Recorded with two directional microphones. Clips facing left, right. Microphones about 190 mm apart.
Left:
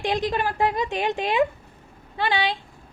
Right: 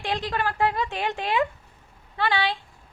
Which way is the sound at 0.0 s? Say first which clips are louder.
Left 3 dB; 15° left (ahead or behind).